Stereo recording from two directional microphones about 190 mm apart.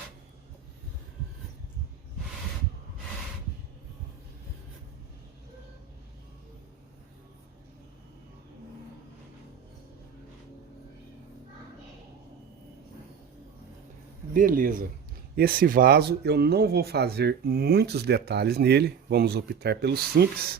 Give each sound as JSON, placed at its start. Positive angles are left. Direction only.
{"t": 14.3, "sound": "speech", "side_deg": -45}